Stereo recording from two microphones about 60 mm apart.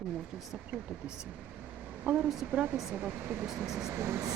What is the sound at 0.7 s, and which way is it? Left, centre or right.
Speech, centre.